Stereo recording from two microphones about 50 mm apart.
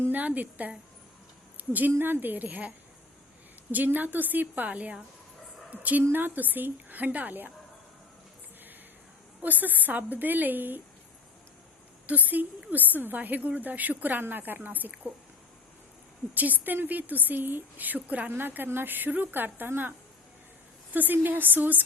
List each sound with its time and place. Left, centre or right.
0.1 s a woman's voice: right
9.4 s a woman's voice: right
12.0 s a woman's voice: right
16.3 s a woman's voice: right
20.9 s a woman's voice: right